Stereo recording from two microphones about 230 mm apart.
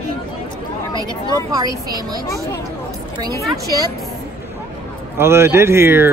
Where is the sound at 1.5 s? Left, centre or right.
Centre.